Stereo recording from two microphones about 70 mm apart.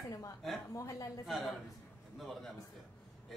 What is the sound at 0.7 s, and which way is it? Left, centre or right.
Speech, left.